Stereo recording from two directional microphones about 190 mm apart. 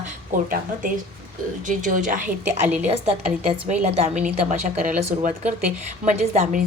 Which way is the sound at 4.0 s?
35° right (ahead or behind).